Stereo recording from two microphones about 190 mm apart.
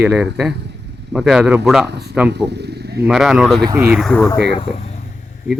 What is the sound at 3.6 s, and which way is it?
Speech, 20° right (ahead or behind).